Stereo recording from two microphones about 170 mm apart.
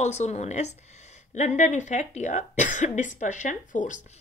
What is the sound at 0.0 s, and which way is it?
Speech, 40° left (ahead or behind).